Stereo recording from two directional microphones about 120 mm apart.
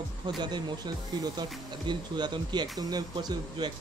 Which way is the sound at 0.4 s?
35° right (ahead or behind).